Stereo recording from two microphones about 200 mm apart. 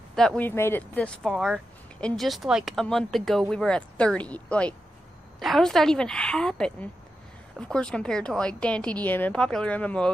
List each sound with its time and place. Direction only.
0.1 s speech: 5° left (ahead or behind)